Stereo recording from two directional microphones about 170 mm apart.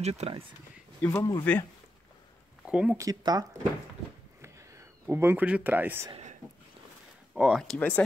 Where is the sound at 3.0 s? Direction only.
20° right (ahead or behind).